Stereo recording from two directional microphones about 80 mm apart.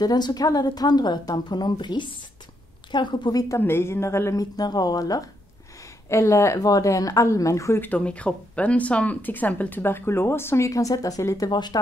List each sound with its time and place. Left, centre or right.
0.0 s a woman's voice: left
3.5 s a woman's voice: left
4.4 s speech: left
6.0 s a woman's voice: left
7.8 s speech: centre
10.7 s speech: left
11.5 s a woman's voice: left